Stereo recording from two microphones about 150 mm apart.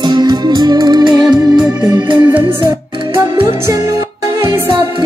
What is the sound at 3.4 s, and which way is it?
Music, 20° right (ahead or behind).